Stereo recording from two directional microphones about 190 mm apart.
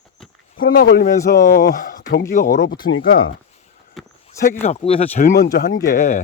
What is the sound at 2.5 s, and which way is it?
Speech, 65° left (ahead or behind).